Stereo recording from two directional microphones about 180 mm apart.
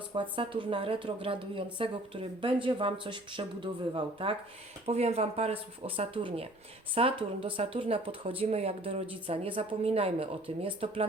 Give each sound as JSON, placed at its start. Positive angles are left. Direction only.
{"t": 0.1, "sound": "speech", "side_deg": -25}